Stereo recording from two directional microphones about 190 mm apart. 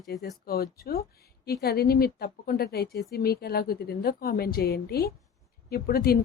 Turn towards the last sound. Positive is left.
turn(degrees=55)  # may be behind; listen again after turning